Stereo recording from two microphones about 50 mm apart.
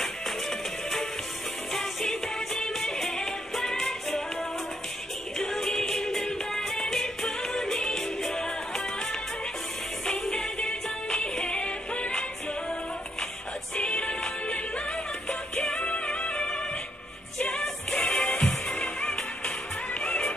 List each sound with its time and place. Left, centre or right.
0.0 s music: centre; by 12.1 s left
13.7 s music: left